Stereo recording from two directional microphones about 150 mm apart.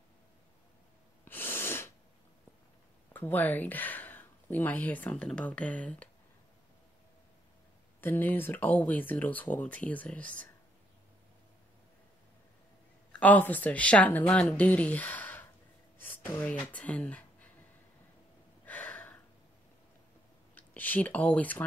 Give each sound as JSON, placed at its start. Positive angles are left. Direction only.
{"t": 1.2, "sound": "sneeze", "side_deg": 15}
{"t": 3.1, "sound": "speech", "side_deg": 10}
{"t": 8.0, "sound": "speech", "side_deg": 15}
{"t": 13.1, "sound": "speech", "side_deg": 10}
{"t": 18.7, "sound": "a sound", "side_deg": 10}
{"t": 20.5, "sound": "speech", "side_deg": 10}